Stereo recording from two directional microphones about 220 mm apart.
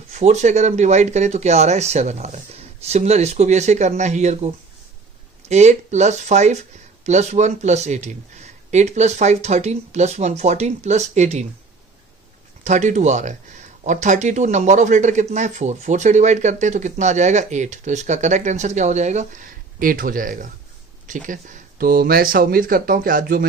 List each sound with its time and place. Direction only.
0.1 s speech: 30° right (ahead or behind)
12.6 s speech: 35° right (ahead or behind)